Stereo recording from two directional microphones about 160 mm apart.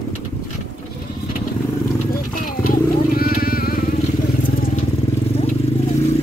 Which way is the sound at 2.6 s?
70° left (ahead or behind).